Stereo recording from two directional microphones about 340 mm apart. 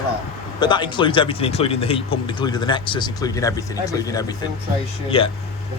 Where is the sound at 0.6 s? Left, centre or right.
Centre.